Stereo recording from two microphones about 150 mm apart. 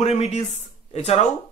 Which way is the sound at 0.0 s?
45° left (ahead or behind).